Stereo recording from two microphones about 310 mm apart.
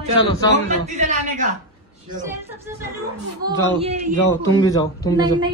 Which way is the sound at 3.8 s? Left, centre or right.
Centre.